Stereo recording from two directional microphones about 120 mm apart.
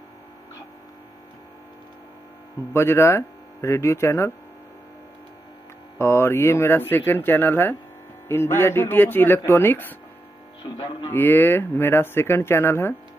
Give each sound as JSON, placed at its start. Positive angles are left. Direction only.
{"t": 2.7, "sound": "speech", "side_deg": 20}
{"t": 5.9, "sound": "speech", "side_deg": 20}
{"t": 10.6, "sound": "speech", "side_deg": 40}
{"t": 11.1, "sound": "speech", "side_deg": 15}